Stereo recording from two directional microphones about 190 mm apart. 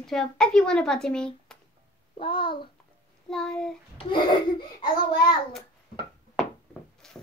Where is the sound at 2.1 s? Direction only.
25° left (ahead or behind).